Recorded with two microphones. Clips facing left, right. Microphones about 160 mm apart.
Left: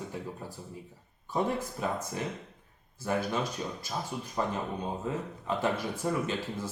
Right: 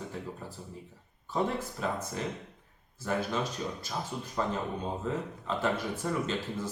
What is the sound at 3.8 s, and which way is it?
Speech, 10° left (ahead or behind).